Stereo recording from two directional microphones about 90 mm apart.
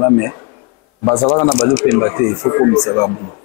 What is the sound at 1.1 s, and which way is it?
Speech, 10° left (ahead or behind).